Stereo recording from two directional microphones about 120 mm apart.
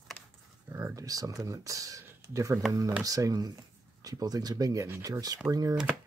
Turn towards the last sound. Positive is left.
turn(degrees=-25)  # may be behind; listen again after turning